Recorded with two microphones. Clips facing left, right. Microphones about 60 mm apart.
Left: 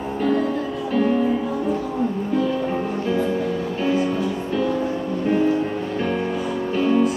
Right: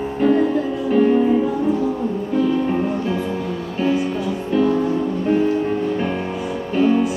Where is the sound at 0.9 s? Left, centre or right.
Centre.